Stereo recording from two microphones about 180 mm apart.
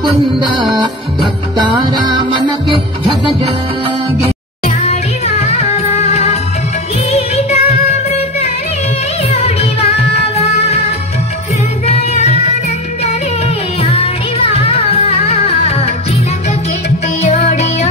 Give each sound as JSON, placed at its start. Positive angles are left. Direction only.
{"t": 0.3, "sound": "music", "side_deg": -25}
{"t": 4.6, "sound": "music", "side_deg": 40}
{"t": 9.3, "sound": "music", "side_deg": 35}
{"t": 11.8, "sound": "music", "side_deg": 35}
{"t": 13.8, "sound": "music", "side_deg": 35}
{"t": 17.3, "sound": "music", "side_deg": 40}